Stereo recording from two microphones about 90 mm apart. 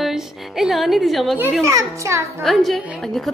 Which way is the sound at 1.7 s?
35° right (ahead or behind).